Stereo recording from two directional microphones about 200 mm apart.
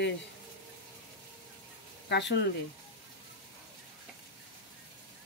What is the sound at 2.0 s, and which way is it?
Speech, 60° left (ahead or behind).